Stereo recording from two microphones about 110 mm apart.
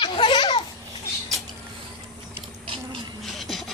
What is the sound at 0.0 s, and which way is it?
Baby laughter, 45° left (ahead or behind).